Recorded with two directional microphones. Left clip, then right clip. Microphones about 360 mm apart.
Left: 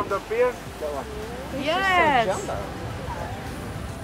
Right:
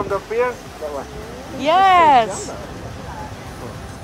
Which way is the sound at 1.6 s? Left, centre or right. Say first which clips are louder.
Right 9 dB; centre.